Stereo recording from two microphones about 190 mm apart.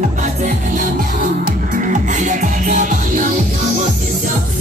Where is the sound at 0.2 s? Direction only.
40° right (ahead or behind).